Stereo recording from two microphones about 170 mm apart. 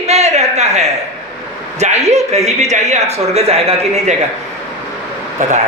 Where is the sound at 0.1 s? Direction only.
40° right (ahead or behind).